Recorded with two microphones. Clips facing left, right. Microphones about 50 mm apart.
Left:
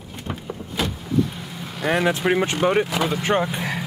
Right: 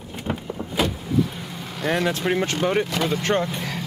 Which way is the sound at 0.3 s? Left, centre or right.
Right.